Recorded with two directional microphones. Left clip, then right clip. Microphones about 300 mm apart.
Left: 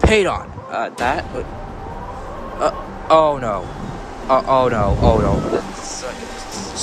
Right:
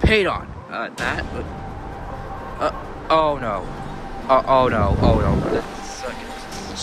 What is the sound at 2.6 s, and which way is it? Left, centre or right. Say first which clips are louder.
Speech: left 4 dB; centre.